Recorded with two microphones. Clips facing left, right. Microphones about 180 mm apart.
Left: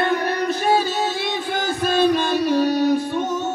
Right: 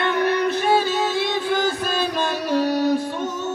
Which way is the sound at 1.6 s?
55° left (ahead or behind).